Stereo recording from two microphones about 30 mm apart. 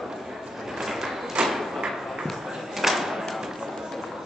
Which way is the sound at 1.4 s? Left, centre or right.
Right.